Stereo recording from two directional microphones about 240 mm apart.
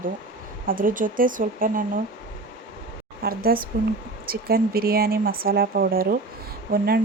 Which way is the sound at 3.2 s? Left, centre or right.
Right.